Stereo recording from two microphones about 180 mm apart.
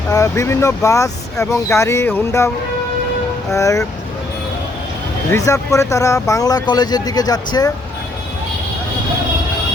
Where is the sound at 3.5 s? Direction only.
15° left (ahead or behind).